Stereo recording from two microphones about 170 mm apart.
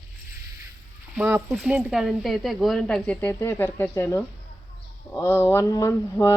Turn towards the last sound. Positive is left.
turn(degrees=20)  # may be behind; listen again after turning